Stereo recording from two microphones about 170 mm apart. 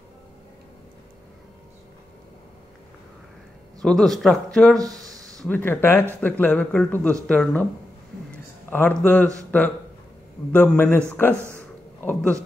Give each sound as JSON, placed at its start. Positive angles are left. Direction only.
{"t": 3.8, "sound": "speech", "side_deg": 0}
{"t": 4.7, "sound": "a sound", "side_deg": -20}
{"t": 5.4, "sound": "a man's voice", "side_deg": 10}
{"t": 8.3, "sound": "a sound", "side_deg": 10}
{"t": 10.5, "sound": "a man's voice", "side_deg": 10}
{"t": 12.0, "sound": "a man's voice", "side_deg": 10}